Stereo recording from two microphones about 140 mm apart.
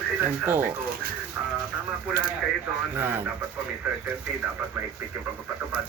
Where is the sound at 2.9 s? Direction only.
15° right (ahead or behind).